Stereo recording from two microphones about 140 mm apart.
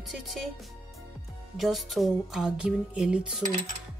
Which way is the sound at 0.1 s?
Centre (ahead or behind).